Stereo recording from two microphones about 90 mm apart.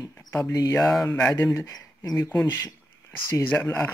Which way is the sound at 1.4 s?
30° left (ahead or behind).